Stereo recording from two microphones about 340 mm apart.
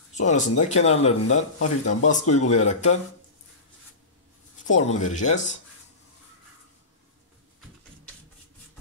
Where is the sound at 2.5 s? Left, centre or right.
Left.